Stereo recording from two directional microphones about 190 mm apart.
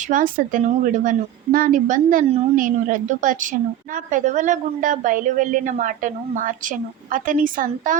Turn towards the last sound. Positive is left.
turn(degrees=-45)  # may be behind; listen again after turning